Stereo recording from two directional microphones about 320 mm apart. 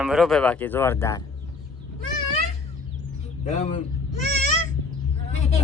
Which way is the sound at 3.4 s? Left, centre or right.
Left.